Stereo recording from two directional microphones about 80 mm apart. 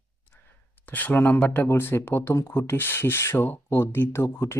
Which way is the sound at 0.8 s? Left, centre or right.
Left.